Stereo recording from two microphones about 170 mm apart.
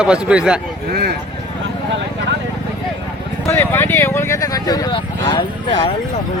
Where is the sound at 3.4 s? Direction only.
15° left (ahead or behind).